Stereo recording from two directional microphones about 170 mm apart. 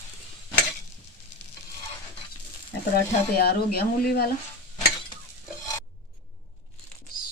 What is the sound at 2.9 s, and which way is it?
Speech, 65° left (ahead or behind).